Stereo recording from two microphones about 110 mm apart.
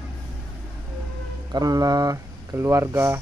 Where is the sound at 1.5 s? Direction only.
35° right (ahead or behind).